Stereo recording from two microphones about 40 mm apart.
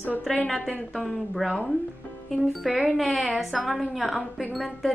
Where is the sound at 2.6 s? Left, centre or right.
Centre.